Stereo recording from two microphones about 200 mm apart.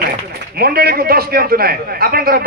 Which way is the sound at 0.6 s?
50° right (ahead or behind).